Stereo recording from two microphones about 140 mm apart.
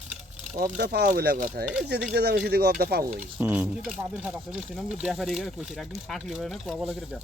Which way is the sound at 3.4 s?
15° right (ahead or behind).